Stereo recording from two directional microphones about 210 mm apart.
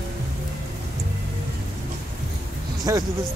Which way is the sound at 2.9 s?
15° right (ahead or behind).